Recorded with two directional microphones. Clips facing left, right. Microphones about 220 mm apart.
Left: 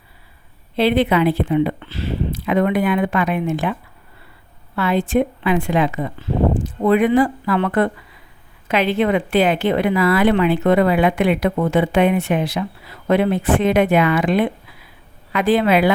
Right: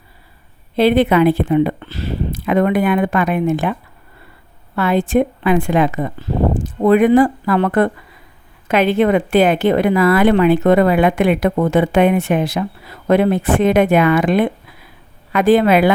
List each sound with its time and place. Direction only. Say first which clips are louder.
0.8 s speech: right 4 dB; 45° right (ahead or behind)